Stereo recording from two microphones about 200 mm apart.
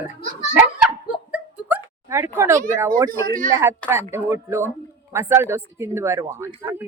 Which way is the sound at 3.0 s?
45° right (ahead or behind).